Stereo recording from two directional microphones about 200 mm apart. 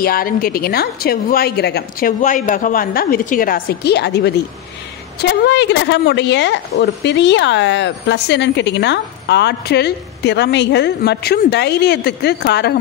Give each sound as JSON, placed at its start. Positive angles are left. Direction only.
{"t": 0.0, "sound": "a woman's voice", "side_deg": 45}